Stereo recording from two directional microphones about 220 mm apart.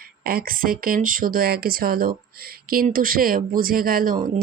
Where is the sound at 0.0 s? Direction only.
40° right (ahead or behind).